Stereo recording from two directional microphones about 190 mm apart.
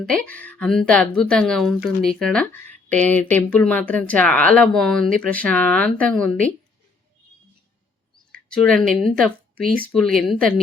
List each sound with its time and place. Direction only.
0.1 s speech: 5° left (ahead or behind)
8.1 s speech: 5° left (ahead or behind)
9.6 s speech: 50° right (ahead or behind)
9.9 s speech: centre (ahead or behind)